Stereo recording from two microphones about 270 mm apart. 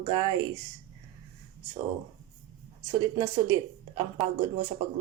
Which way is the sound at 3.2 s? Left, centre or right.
Centre.